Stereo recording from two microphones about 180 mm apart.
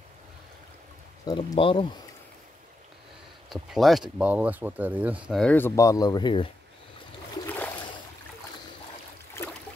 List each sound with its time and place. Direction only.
1.2 s speech: 25° left (ahead or behind)
3.4 s speech: centre (ahead or behind)
5.3 s speech: 5° left (ahead or behind); by 6.5 s 25° left (ahead or behind)
7.4 s a sound: 10° left (ahead or behind)